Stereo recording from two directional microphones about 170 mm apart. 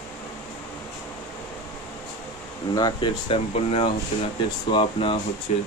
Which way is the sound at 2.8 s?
25° left (ahead or behind).